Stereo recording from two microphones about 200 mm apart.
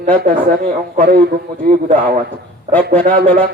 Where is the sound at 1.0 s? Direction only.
40° right (ahead or behind).